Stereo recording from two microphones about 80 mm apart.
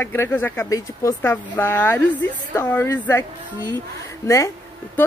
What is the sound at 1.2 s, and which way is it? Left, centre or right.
A woman's voice, left.